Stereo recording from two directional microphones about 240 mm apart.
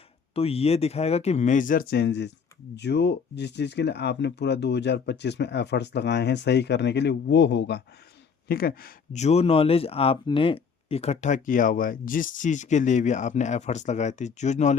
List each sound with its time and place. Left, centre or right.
0.3 s a man's voice: left